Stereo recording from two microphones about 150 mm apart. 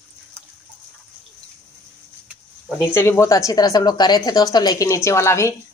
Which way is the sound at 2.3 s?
10° right (ahead or behind).